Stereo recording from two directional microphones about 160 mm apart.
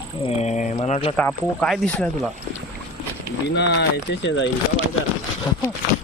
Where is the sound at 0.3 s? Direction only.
45° left (ahead or behind).